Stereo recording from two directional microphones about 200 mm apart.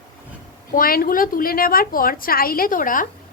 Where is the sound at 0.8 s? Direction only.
45° left (ahead or behind).